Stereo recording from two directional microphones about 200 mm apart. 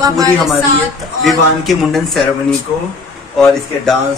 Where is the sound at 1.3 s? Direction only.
Centre (ahead or behind).